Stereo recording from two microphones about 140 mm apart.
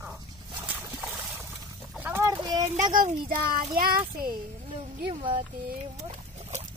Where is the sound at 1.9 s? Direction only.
10° right (ahead or behind).